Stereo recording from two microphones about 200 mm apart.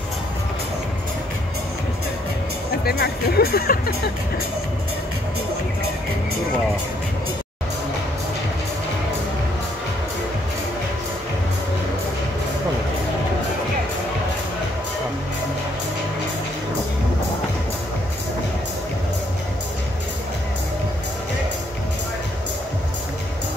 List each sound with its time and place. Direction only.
2.8 s speech: 50° left (ahead or behind)